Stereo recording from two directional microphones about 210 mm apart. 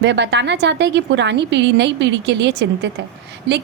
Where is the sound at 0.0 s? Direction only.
55° right (ahead or behind).